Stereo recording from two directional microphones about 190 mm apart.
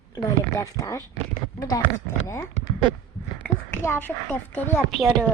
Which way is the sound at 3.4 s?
10° left (ahead or behind).